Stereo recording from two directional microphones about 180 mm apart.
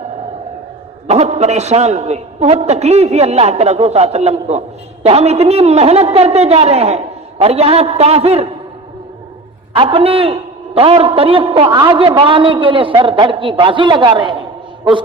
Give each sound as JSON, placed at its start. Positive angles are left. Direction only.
{"t": 1.0, "sound": "a man's voice", "side_deg": -35}
{"t": 9.7, "sound": "a man's voice", "side_deg": -30}